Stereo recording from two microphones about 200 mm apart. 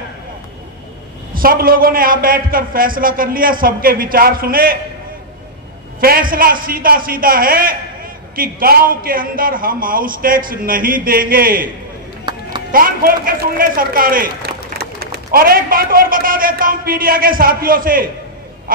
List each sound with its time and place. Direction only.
1.3 s a man's voice: 45° right (ahead or behind)
5.9 s a man's voice: 45° right (ahead or behind)
12.7 s a man's voice: 45° right (ahead or behind)